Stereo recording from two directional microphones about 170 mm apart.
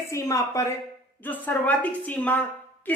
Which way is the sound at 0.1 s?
20° left (ahead or behind).